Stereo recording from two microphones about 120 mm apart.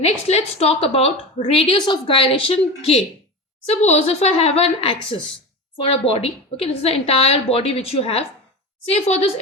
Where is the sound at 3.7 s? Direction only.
65° left (ahead or behind).